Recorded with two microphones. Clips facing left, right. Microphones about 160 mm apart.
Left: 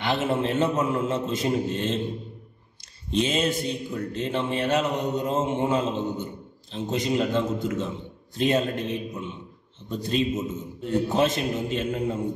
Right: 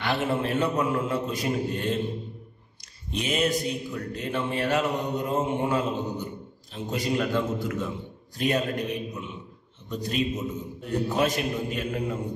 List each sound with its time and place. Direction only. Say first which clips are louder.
0.0 s mantra: left 2 dB; 20° left (ahead or behind)
3.1 s mantra: left 2 dB; 25° left (ahead or behind)